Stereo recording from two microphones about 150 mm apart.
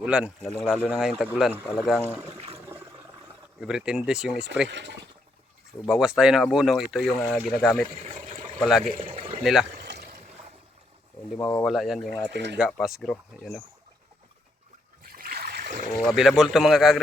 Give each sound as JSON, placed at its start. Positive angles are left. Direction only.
{"t": 0.0, "sound": "speech", "side_deg": -5}
{"t": 2.2, "sound": "water", "side_deg": -40}
{"t": 3.6, "sound": "speech", "side_deg": -5}
{"t": 5.8, "sound": "speech", "side_deg": -5}
{"t": 7.9, "sound": "speech", "side_deg": -40}
{"t": 8.6, "sound": "speech", "side_deg": 0}
{"t": 9.0, "sound": "a sound", "side_deg": -40}
{"t": 9.4, "sound": "speech", "side_deg": 0}
{"t": 9.9, "sound": "boat", "side_deg": -80}
{"t": 11.3, "sound": "speech", "side_deg": 5}
{"t": 15.0, "sound": "splash", "side_deg": -80}
{"t": 16.0, "sound": "speech", "side_deg": 0}